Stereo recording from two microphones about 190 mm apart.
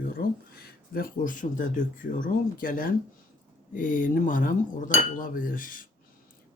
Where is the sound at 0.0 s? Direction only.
50° left (ahead or behind).